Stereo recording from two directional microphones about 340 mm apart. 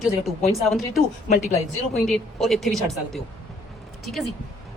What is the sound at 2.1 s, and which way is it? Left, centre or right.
Speech, centre.